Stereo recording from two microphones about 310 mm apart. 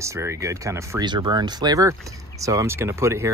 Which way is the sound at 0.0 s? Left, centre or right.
Centre.